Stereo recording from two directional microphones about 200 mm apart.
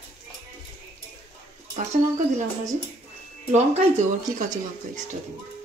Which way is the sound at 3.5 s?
35° right (ahead or behind).